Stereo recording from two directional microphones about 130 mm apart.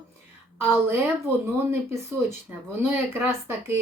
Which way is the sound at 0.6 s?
15° right (ahead or behind).